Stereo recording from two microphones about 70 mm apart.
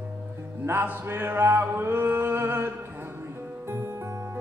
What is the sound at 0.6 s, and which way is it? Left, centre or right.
Music, right.